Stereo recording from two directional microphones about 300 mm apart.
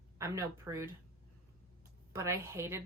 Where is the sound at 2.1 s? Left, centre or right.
Centre.